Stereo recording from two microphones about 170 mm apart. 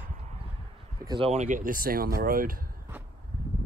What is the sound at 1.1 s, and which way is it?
Speech, 35° right (ahead or behind).